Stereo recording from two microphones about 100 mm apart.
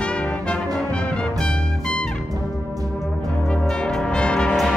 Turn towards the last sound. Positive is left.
turn(degrees=10)  # may be behind; listen again after turning